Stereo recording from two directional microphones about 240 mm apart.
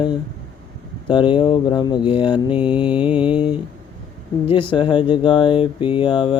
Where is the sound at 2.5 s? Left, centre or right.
Centre.